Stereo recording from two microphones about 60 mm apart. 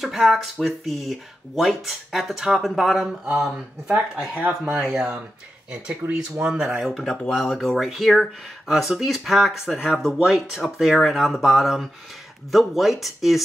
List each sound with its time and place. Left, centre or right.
0.0 s speech: centre
4.4 s speech: right
5.7 s speech: centre
7.0 s speech: centre